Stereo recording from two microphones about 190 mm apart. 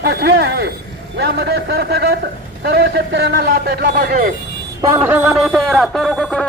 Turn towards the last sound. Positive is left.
turn(degrees=5)  # may be behind; listen again after turning